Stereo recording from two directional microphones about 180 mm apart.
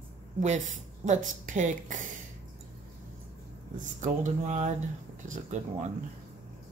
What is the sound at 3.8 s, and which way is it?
Speech, 45° right (ahead or behind).